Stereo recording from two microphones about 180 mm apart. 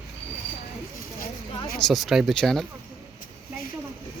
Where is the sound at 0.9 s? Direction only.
55° left (ahead or behind).